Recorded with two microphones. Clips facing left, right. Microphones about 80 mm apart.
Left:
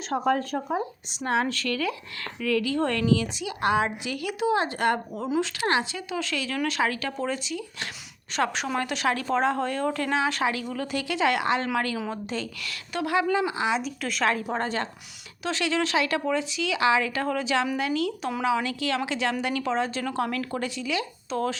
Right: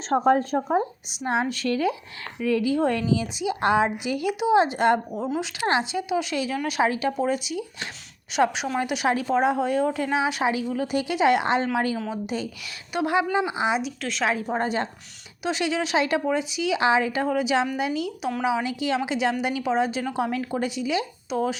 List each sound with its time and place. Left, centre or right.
0.1 s a woman's voice: right
5.1 s speech: centre
5.4 s a woman's voice: centre
8.4 s speech: centre
13.8 s speech: centre
14.5 s a woman's voice: centre